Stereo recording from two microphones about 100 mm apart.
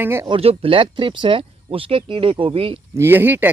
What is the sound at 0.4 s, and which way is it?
Speech, 75° right (ahead or behind).